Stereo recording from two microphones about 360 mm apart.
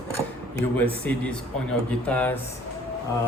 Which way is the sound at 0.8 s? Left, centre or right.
Centre.